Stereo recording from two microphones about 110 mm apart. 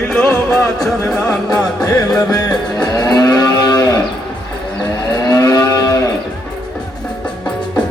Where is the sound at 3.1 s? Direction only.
35° left (ahead or behind).